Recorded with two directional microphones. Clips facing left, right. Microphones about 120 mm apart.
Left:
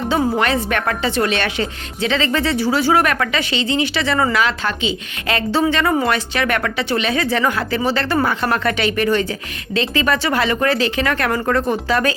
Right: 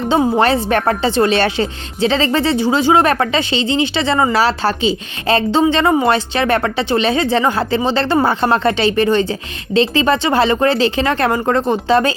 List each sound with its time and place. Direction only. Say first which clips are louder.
0.1 s a woman's voice: right 5 dB; 30° right (ahead or behind)
5.5 s a woman's voice: right 2 dB; 20° right (ahead or behind)